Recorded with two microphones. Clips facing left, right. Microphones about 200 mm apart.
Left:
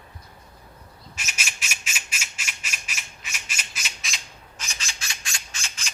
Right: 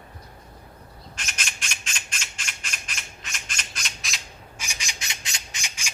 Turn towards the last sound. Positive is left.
turn(degrees=-15)  # may be behind; listen again after turning